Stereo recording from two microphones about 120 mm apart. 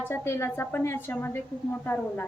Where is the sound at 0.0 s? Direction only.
20° left (ahead or behind).